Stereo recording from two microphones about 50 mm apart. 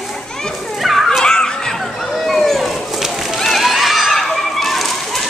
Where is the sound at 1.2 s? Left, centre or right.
Centre.